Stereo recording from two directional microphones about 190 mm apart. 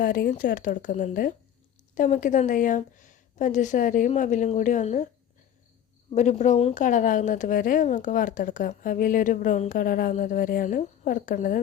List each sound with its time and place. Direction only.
0.0 s a woman's voice: 45° left (ahead or behind)
6.1 s a woman's voice: 40° left (ahead or behind)